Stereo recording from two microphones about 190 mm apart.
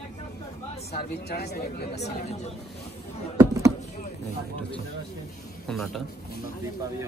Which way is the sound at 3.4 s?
15° right (ahead or behind).